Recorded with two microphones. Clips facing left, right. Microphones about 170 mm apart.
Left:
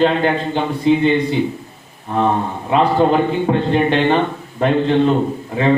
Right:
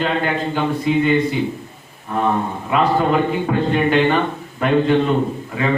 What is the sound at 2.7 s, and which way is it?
A man's voice, 30° left (ahead or behind).